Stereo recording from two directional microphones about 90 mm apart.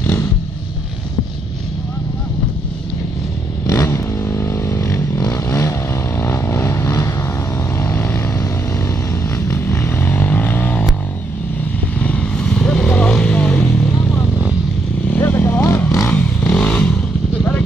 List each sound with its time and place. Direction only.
0.0 s vehicle: 30° left (ahead or behind)
3.6 s vehicle: 30° left (ahead or behind)
7.7 s vehicle: 20° left (ahead or behind)
8.4 s vehicle: 35° left (ahead or behind)
9.5 s vehicle: 25° left (ahead or behind)
12.0 s vehicle: 10° left (ahead or behind)
15.0 s vehicle: 20° left (ahead or behind)
16.1 s vehicle: 15° left (ahead or behind)